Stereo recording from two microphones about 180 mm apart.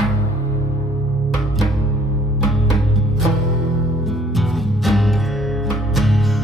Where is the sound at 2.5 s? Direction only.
Centre (ahead or behind).